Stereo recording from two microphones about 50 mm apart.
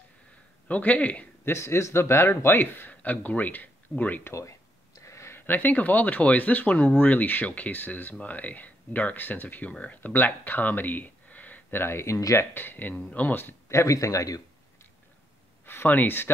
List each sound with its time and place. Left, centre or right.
0.7 s speech: left
1.4 s a man's voice: left
2.9 s speech: left
4.2 s speech: left
5.0 s a sound: left
5.3 s speech: left
11.8 s a man's voice: left
12.5 s speech: left
13.7 s speech: left
15.6 s a sound: left
15.9 s speech: left